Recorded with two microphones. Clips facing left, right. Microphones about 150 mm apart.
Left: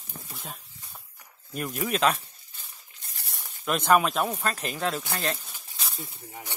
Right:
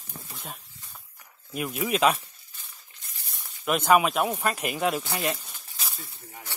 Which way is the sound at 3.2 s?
70° left (ahead or behind).